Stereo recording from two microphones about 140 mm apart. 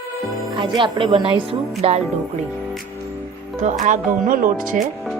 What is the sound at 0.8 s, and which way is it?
Speech, 35° right (ahead or behind).